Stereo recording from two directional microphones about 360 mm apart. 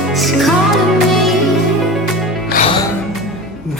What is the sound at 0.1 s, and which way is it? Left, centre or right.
Music, centre.